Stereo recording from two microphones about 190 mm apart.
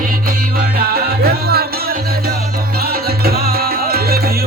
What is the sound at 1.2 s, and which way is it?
Music, 55° right (ahead or behind).